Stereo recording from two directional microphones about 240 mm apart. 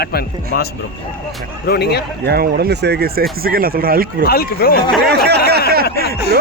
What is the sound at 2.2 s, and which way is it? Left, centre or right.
Speech, right.